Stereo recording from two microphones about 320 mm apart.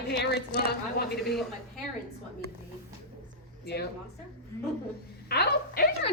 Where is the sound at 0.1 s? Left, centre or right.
Left.